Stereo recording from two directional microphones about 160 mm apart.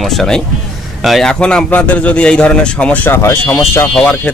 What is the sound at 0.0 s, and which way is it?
Speech, centre (ahead or behind).